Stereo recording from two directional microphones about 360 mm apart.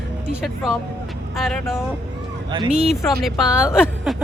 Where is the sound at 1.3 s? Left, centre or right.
Centre.